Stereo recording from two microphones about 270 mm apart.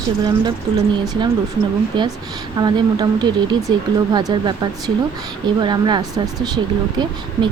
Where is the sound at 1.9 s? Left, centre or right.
Centre.